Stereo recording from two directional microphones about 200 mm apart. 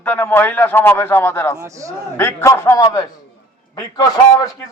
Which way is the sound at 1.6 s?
15° right (ahead or behind).